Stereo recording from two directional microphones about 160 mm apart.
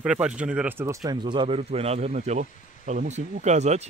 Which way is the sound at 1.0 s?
30° right (ahead or behind).